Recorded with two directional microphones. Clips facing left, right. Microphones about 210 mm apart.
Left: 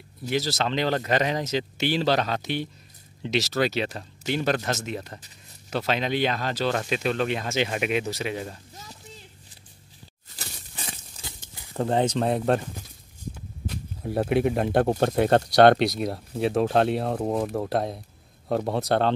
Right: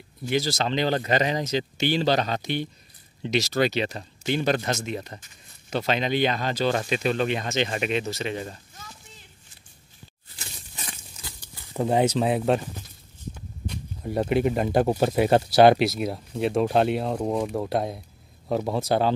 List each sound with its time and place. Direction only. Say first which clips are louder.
0.3 s speech: right 1 dB; centre (ahead or behind)
8.8 s chopping: left 1 dB; 40° left (ahead or behind)
10.3 s a sound: left 2 dB; 40° left (ahead or behind)
10.9 s a sound: left 1 dB; 25° left (ahead or behind)
11.7 s speech: right 2 dB; 10° right (ahead or behind)
13.7 s speech: even; centre (ahead or behind)